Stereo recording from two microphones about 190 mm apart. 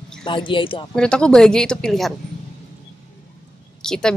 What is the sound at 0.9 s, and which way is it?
Speech, 5° left (ahead or behind).